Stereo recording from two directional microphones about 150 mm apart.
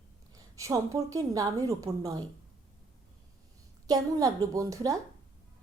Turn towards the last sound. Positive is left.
turn(degrees=-20)  # may be behind; listen again after turning